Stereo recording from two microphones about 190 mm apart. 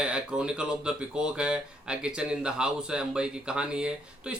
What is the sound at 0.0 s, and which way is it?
Speech, 5° right (ahead or behind).